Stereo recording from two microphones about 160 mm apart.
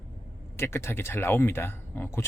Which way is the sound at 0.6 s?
15° left (ahead or behind).